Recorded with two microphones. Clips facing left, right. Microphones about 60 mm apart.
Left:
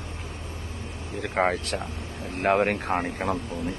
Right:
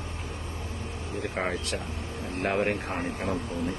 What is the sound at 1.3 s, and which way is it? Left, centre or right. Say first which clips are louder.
Speech: left 8 dB; left.